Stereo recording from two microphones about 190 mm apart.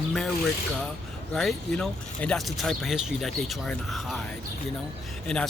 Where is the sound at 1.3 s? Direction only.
5° left (ahead or behind).